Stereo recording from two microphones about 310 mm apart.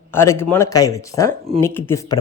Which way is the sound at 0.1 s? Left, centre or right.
Centre.